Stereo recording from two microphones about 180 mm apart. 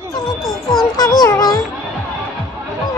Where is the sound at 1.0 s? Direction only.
20° left (ahead or behind).